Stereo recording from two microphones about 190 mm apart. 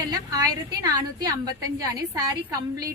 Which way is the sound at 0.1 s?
20° right (ahead or behind).